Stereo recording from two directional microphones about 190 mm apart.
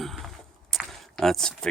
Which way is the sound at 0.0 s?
Centre (ahead or behind).